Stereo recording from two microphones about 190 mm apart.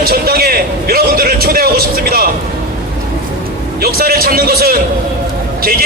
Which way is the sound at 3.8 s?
55° right (ahead or behind).